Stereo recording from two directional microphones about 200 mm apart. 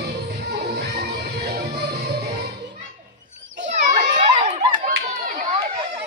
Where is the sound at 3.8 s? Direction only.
35° right (ahead or behind).